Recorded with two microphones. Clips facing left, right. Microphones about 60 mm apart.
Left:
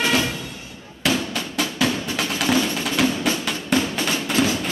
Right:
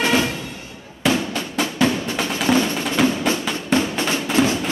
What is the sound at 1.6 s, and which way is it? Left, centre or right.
Music, right.